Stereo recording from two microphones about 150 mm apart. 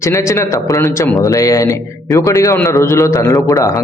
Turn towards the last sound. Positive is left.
turn(degrees=20)  # may be behind; listen again after turning